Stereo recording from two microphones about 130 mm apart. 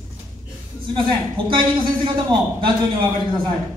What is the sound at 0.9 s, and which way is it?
A man's voice, 40° right (ahead or behind).